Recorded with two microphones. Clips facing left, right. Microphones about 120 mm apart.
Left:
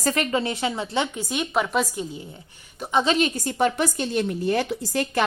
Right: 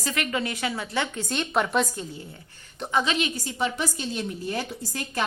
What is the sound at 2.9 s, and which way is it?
A woman's voice, 35° left (ahead or behind).